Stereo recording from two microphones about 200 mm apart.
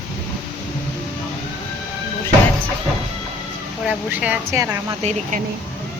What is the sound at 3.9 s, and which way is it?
Speech, 5° right (ahead or behind).